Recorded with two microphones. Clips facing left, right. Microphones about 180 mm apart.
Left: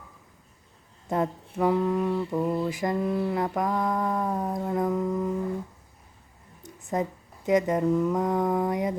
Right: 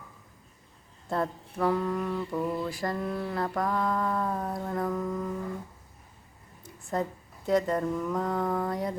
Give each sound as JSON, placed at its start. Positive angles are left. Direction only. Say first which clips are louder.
{"t": 1.0, "sound": "mantra", "louder": "left 3 dB", "side_deg": 15}
{"t": 6.6, "sound": "speech", "louder": "left 2 dB", "side_deg": 20}